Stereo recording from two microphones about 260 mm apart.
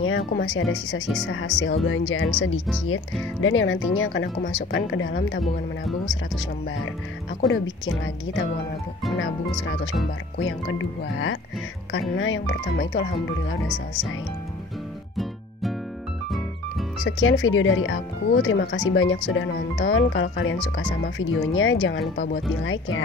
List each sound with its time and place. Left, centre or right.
0.0 s speech: left
3.3 s speech: left
5.4 s speech: centre
10.4 s speech: left
13.7 s speech: centre
17.0 s speech: left